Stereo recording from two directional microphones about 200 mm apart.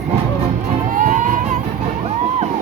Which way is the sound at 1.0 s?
40° right (ahead or behind).